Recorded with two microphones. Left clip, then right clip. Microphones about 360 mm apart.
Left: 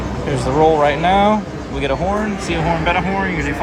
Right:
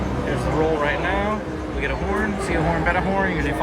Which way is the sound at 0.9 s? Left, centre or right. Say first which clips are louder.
Left 9 dB; left.